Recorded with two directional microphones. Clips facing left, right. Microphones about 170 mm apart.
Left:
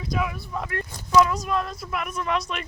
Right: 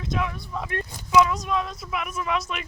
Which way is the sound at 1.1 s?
Centre (ahead or behind).